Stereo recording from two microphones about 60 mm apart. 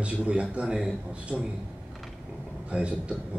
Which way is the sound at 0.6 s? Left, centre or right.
Centre.